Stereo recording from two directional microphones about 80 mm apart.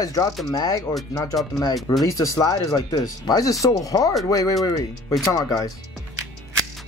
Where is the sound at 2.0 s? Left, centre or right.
Left.